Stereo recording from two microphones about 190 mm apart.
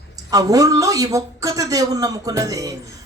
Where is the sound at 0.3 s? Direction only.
20° right (ahead or behind).